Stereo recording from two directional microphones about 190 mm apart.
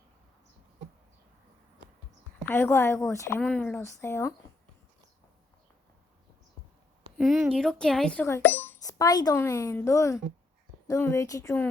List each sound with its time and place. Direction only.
2.5 s speech: 10° left (ahead or behind)
7.2 s speech: 5° right (ahead or behind); by 11.7 s 10° left (ahead or behind)